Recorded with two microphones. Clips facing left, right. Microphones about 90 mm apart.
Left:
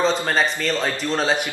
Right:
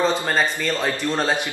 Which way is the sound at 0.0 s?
10° right (ahead or behind).